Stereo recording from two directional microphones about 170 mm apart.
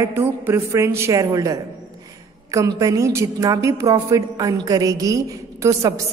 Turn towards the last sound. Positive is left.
turn(degrees=-20)  # may be behind; listen again after turning